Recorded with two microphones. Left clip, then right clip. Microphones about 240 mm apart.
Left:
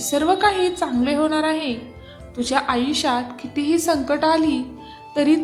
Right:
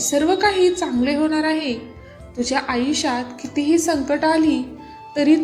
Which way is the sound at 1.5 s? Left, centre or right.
Left.